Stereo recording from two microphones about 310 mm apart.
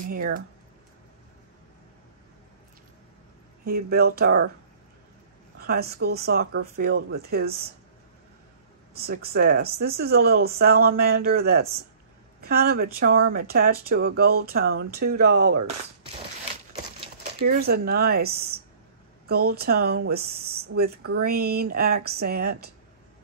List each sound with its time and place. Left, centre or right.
0.0 s speech: right
3.6 s speech: right
5.6 s speech: right
8.9 s speech: right
17.2 s speech: right